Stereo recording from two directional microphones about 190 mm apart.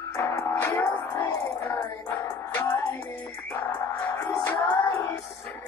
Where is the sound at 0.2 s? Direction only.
15° left (ahead or behind).